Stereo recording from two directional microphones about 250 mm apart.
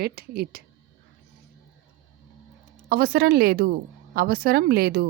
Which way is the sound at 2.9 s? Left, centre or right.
Right.